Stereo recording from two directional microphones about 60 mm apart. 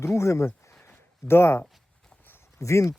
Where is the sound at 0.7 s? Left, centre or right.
Left.